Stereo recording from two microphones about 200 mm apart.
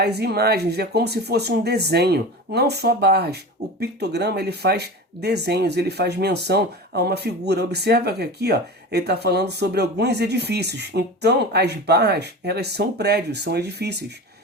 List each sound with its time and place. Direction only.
0.0 s speech: 55° right (ahead or behind)